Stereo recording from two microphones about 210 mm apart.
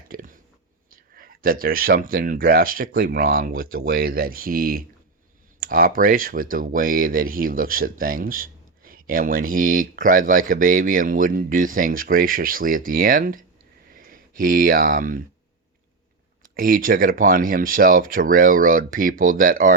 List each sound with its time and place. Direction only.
0.1 s chewing: 40° right (ahead or behind)
0.9 s speech: 40° right (ahead or behind)
16.6 s speech: 40° right (ahead or behind)